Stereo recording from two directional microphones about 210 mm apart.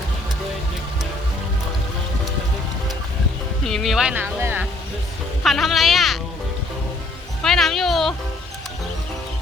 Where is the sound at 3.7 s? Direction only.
Centre (ahead or behind).